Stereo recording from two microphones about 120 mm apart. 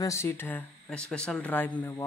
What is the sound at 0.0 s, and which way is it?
Speech, 25° left (ahead or behind).